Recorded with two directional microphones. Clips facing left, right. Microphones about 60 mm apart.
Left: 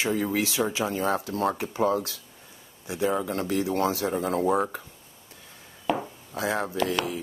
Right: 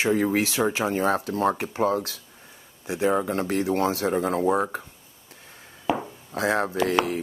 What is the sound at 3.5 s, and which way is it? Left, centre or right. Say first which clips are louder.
Speech: even; right.